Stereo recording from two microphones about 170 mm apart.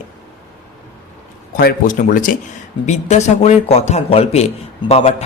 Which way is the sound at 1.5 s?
55° left (ahead or behind).